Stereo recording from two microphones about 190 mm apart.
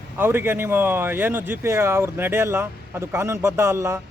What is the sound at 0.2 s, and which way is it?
Speech, 10° right (ahead or behind).